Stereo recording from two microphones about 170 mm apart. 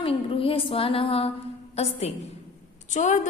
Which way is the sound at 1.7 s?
40° left (ahead or behind).